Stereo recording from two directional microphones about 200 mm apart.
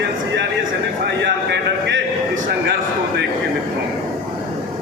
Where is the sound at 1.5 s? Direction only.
60° right (ahead or behind).